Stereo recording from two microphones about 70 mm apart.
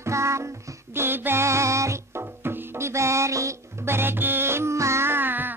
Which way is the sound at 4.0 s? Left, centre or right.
Right.